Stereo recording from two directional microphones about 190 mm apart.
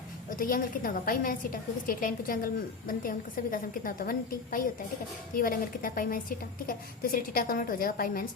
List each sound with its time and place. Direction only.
0.3 s a woman's voice: 50° left (ahead or behind)